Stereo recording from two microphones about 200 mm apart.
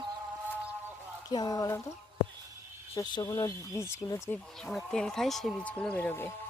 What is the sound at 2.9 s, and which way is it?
Speech, 20° left (ahead or behind).